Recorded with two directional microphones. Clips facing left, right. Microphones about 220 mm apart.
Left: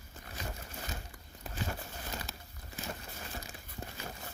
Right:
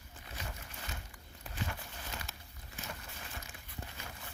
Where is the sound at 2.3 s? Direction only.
35° left (ahead or behind).